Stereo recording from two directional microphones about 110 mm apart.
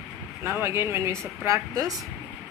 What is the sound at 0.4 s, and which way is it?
Speech, 20° right (ahead or behind).